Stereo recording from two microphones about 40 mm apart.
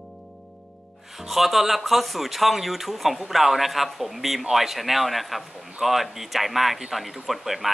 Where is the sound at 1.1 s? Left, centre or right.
Centre.